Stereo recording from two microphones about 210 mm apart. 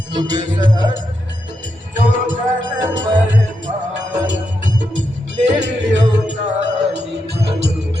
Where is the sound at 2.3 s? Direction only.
65° right (ahead or behind).